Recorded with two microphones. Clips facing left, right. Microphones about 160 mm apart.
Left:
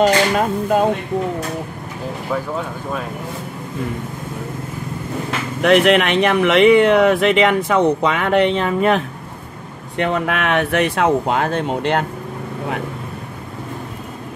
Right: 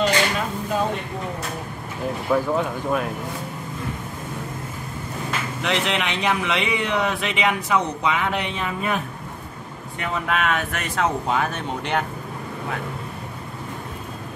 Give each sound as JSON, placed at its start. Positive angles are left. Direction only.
{"t": 0.0, "sound": "speech", "side_deg": 50}
{"t": 2.3, "sound": "speech", "side_deg": 0}
{"t": 5.6, "sound": "speech", "side_deg": 60}